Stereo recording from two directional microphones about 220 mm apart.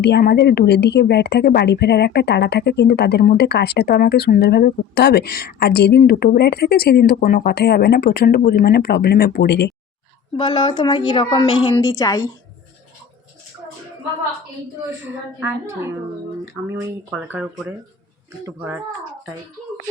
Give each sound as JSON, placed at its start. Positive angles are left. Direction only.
{"t": 0.0, "sound": "speech", "side_deg": 45}
{"t": 10.3, "sound": "a woman's voice", "side_deg": 20}
{"t": 15.4, "sound": "speech", "side_deg": -10}